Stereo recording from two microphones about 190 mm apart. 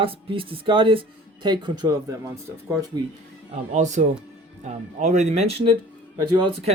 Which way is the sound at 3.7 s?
40° right (ahead or behind).